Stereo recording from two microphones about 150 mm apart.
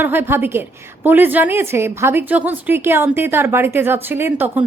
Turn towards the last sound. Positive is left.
turn(degrees=-15)  # may be behind; listen again after turning